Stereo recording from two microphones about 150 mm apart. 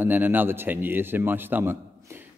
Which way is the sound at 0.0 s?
10° right (ahead or behind).